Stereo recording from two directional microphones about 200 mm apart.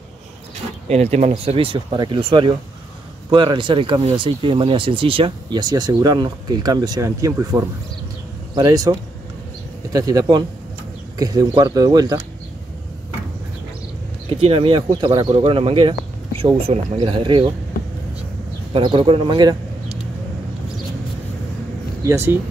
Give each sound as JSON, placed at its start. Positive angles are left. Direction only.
{"t": 0.8, "sound": "speech", "side_deg": -35}
{"t": 9.9, "sound": "speech", "side_deg": -20}
{"t": 14.4, "sound": "speech", "side_deg": -25}
{"t": 18.7, "sound": "speech", "side_deg": -25}
{"t": 22.0, "sound": "speech", "side_deg": -10}